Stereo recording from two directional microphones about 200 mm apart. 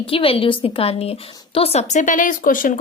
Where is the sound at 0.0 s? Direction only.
25° left (ahead or behind).